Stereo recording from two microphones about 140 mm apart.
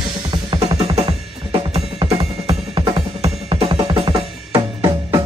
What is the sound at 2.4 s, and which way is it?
Music, 40° right (ahead or behind).